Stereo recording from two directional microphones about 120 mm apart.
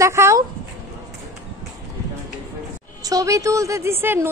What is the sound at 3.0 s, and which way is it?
A woman's voice, 30° right (ahead or behind).